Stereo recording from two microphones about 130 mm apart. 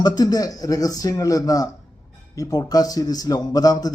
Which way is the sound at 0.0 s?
30° left (ahead or behind).